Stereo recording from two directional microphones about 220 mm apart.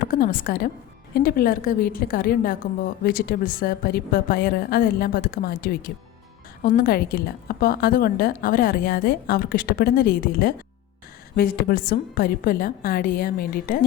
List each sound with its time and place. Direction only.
0.1 s a woman's voice: 40° left (ahead or behind)